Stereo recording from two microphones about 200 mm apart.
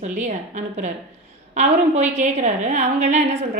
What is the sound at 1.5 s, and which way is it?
Speech, 35° right (ahead or behind).